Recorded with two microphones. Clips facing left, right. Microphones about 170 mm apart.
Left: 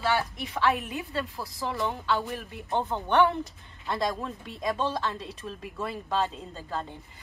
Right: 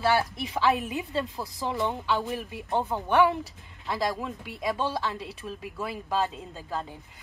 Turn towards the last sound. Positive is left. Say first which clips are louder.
# even
turn(degrees=-5)  # may be behind; listen again after turning